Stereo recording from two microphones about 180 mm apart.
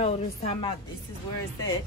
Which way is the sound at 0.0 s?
35° left (ahead or behind).